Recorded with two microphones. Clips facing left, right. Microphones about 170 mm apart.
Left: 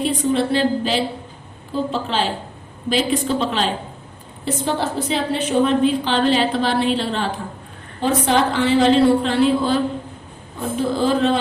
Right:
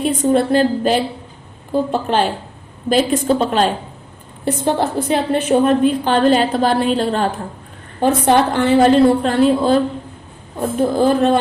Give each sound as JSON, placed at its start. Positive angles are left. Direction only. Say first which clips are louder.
{"t": 0.0, "sound": "a woman's voice", "louder": "right 4 dB", "side_deg": -45}
{"t": 10.8, "sound": "a woman's voice", "louder": "right 4 dB", "side_deg": -50}